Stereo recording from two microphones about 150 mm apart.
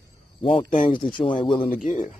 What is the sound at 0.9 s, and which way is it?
Speech, 35° left (ahead or behind).